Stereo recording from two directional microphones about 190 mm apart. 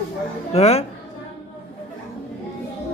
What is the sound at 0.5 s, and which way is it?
Speech, 35° left (ahead or behind).